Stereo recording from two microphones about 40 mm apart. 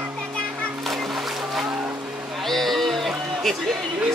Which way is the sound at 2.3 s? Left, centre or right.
Centre.